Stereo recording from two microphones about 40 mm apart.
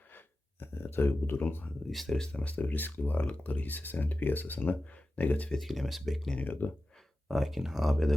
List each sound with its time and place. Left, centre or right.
0.6 s speech: left
1.9 s speech: centre
2.1 s speech: centre
2.4 s speech: left
3.2 s speech: left
4.9 s speech: left
5.5 s speech: centre
6.4 s speech: left
7.3 s speech: centre